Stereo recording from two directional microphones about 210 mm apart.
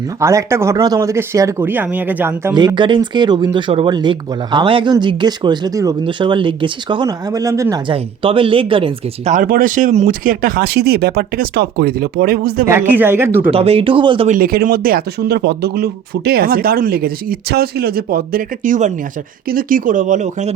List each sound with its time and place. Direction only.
0.2 s speech: 15° right (ahead or behind); by 12.6 s 45° right (ahead or behind)
12.6 s speech: 10° right (ahead or behind)
13.5 s speech: 25° right (ahead or behind)
14.3 s speech: 45° right (ahead or behind)